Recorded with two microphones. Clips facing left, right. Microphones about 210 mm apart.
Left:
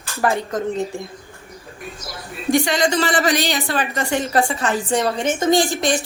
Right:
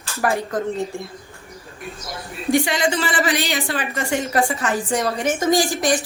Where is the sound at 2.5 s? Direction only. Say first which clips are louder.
Left 2 dB; 40° left (ahead or behind).